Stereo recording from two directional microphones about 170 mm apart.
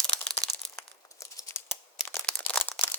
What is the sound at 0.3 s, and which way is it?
Crumpling, 15° left (ahead or behind).